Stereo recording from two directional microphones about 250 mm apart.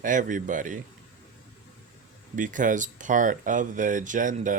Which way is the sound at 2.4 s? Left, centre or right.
Right.